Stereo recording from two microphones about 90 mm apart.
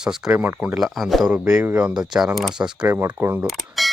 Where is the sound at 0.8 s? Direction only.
Centre (ahead or behind).